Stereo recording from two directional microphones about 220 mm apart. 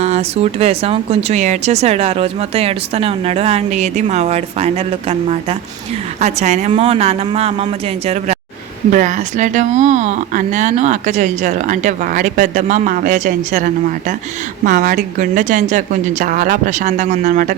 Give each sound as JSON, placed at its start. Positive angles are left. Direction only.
{"t": 0.0, "sound": "speech", "side_deg": -30}